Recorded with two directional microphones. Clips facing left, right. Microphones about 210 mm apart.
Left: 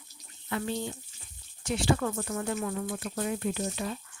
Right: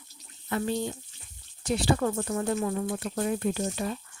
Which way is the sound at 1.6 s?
35° right (ahead or behind).